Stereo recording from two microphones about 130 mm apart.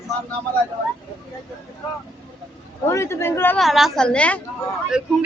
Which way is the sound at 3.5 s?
Centre (ahead or behind).